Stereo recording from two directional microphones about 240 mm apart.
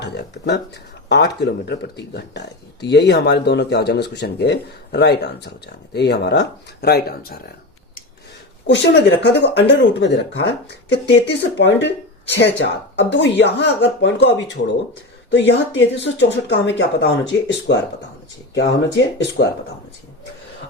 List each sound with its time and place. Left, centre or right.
0.0 s speech: left
8.6 s speech: left